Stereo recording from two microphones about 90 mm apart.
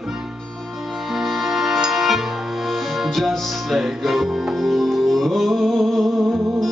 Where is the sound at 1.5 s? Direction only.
Centre (ahead or behind).